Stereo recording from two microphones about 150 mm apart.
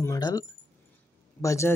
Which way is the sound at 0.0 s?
25° left (ahead or behind).